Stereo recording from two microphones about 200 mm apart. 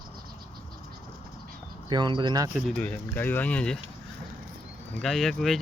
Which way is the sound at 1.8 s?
20° right (ahead or behind).